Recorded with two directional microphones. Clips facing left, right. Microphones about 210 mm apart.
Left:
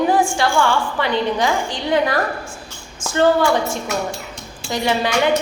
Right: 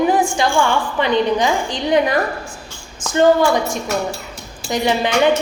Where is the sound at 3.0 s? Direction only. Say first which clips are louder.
Right 2 dB; 15° right (ahead or behind).